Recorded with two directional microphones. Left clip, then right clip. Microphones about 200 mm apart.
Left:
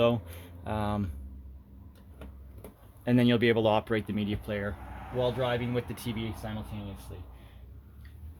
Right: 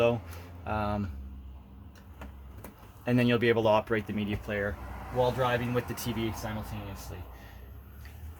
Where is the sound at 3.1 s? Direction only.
45° left (ahead or behind).